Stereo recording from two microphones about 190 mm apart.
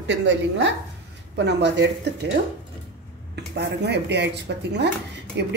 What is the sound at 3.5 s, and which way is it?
Speech, 65° right (ahead or behind).